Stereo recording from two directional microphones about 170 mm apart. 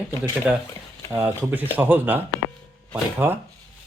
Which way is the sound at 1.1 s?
10° right (ahead or behind).